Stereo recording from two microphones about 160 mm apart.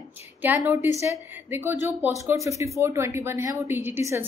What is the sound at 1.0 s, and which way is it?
Speech, 15° right (ahead or behind).